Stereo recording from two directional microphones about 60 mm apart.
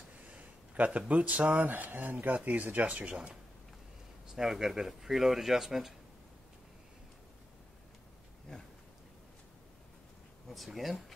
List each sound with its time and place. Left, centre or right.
0.3 s speech: right
4.4 s speech: centre
10.5 s speech: centre